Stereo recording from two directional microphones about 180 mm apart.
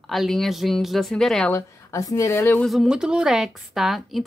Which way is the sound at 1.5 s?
15° left (ahead or behind).